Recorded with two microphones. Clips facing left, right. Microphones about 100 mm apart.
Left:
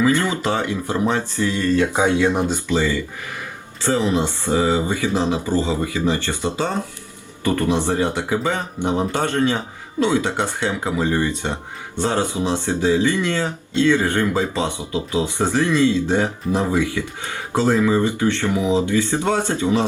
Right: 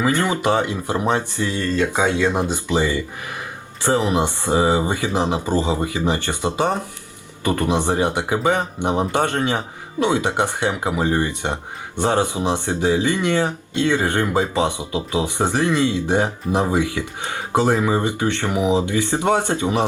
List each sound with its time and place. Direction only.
0.0 s speech: 20° right (ahead or behind)
1.6 s speech: 15° left (ahead or behind)
2.3 s speech: 20° right (ahead or behind)